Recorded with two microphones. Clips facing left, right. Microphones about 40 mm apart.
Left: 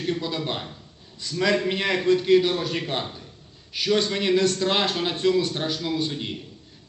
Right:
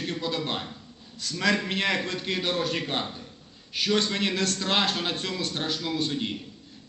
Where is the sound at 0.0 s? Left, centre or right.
Centre.